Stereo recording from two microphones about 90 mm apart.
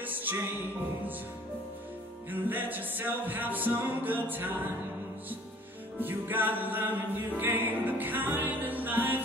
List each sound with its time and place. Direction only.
0.0 s music: 20° right (ahead or behind)
2.3 s music: 20° right (ahead or behind)
5.9 s music: 20° right (ahead or behind)